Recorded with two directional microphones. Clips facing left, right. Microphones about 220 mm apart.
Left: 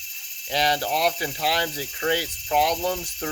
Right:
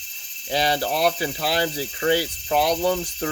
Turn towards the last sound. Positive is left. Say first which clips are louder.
# right 5 dB
turn(degrees=-35)  # may be behind; listen again after turning